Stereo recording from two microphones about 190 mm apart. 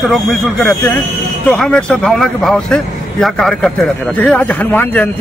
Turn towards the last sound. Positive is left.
turn(degrees=10)  # may be behind; listen again after turning